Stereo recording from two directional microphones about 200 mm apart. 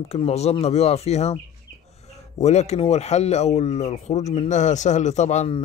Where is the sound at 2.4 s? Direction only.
35° left (ahead or behind).